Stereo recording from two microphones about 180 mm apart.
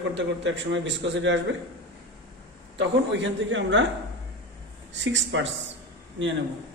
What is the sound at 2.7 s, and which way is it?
A man's voice, 85° right.